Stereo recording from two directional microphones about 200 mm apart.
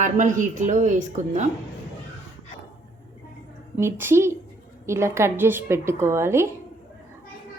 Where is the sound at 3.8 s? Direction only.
10° right (ahead or behind).